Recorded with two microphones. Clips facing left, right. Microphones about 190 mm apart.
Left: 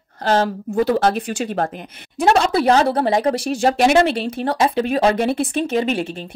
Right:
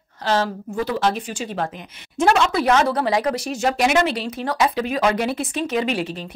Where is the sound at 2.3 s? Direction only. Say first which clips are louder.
Left 3 dB; 35° left (ahead or behind).